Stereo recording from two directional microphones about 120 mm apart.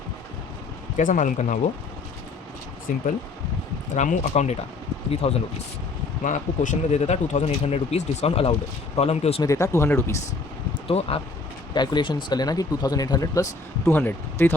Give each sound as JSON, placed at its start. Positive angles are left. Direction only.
{"t": 0.9, "sound": "speech", "side_deg": 90}
{"t": 2.9, "sound": "speech", "side_deg": 90}
{"t": 5.2, "sound": "speech", "side_deg": 55}
{"t": 6.2, "sound": "speech", "side_deg": 90}
{"t": 9.4, "sound": "speech", "side_deg": 25}
{"t": 10.8, "sound": "speech", "side_deg": 55}
{"t": 11.7, "sound": "speech", "side_deg": 35}